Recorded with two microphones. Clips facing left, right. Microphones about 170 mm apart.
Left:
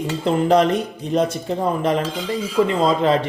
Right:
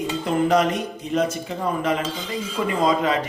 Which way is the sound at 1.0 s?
35° left (ahead or behind).